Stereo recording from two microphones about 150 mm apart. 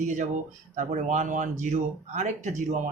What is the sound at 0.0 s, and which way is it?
Speech, 55° right (ahead or behind).